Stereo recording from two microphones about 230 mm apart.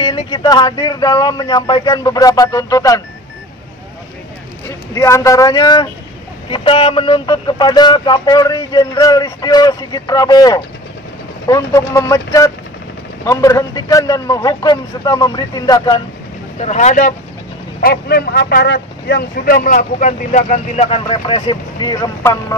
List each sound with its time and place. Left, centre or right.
0.0 s speech: centre
4.6 s speech: centre
16.5 s speech: left; by 22.6 s centre